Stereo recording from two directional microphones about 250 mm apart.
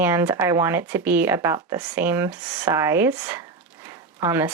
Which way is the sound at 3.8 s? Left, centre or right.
Centre.